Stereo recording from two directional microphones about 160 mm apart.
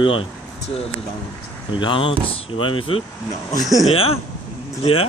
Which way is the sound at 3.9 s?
35° left (ahead or behind).